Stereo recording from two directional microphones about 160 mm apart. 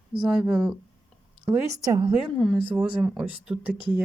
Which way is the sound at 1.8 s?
20° right (ahead or behind).